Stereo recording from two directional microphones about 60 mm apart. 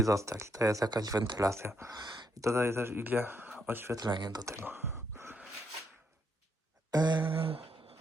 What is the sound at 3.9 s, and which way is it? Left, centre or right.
Speech, right.